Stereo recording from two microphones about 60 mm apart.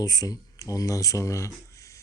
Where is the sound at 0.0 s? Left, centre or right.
Left.